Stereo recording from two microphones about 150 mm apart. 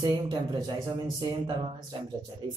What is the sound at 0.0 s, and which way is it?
Speech, 25° right (ahead or behind).